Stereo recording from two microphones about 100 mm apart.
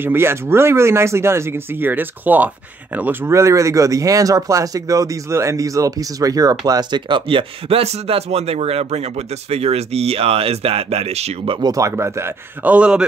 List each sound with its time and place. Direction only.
0.0 s speech: 25° right (ahead or behind); by 11.6 s 80° right
11.6 s speech: 35° right (ahead or behind)
12.7 s a man's voice: 10° right (ahead or behind)